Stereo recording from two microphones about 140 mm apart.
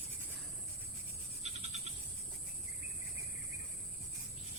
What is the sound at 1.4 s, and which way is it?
Frog, 55° right (ahead or behind).